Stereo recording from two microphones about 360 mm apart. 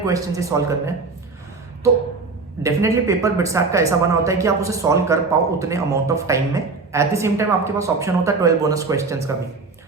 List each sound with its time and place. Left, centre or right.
0.0 s speech: centre
2.6 s speech: centre